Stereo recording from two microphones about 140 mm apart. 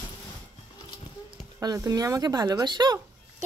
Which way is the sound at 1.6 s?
25° right (ahead or behind).